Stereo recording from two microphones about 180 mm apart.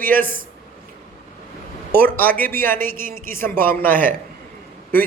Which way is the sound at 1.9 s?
10° left (ahead or behind).